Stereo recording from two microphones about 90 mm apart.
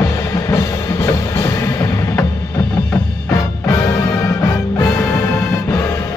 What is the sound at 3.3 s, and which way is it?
Music, 35° left (ahead or behind).